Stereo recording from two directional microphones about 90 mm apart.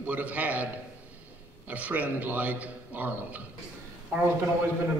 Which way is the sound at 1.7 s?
20° right (ahead or behind).